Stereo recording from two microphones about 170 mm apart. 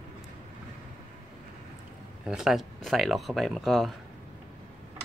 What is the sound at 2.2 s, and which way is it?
Speech, 5° right (ahead or behind).